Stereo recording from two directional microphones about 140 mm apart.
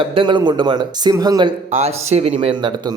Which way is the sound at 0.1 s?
35° right (ahead or behind).